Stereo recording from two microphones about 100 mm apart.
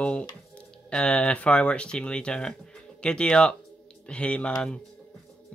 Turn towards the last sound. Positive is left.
turn(degrees=10)  # may be behind; listen again after turning